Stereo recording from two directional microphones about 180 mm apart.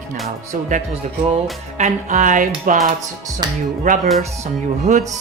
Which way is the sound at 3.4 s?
25° right (ahead or behind).